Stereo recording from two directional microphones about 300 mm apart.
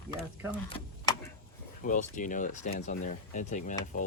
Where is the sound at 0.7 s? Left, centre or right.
Centre.